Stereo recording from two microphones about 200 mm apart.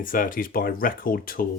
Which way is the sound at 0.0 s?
45° left (ahead or behind).